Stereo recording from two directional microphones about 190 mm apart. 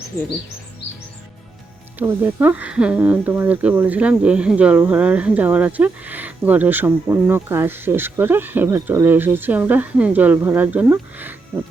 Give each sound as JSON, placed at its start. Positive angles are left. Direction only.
{"t": 0.1, "sound": "speech", "side_deg": 15}
{"t": 2.0, "sound": "speech", "side_deg": -10}